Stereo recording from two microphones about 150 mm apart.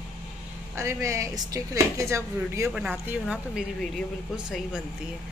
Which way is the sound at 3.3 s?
5° right (ahead or behind).